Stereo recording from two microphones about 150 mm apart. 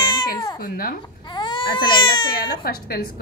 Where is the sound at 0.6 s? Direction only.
75° left (ahead or behind).